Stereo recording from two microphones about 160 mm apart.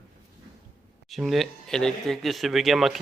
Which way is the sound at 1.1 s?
Centre (ahead or behind).